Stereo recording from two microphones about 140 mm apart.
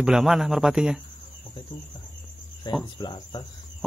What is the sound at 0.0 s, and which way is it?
Speech, 5° right (ahead or behind).